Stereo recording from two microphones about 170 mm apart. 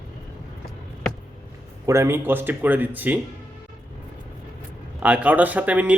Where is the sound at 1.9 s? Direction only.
15° right (ahead or behind).